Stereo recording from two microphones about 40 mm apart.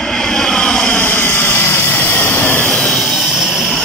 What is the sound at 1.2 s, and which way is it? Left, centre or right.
Vehicle, left.